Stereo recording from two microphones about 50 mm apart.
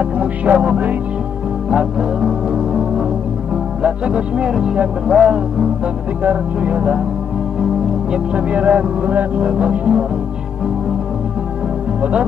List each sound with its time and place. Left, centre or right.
0.0 s speech: right
1.7 s music: centre
3.8 s speech: right
4.5 s speech: centre; by 7.0 s right
8.1 s speech: right
12.0 s speech: right